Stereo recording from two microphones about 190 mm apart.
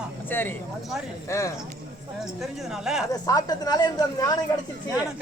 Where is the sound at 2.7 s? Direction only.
Centre (ahead or behind).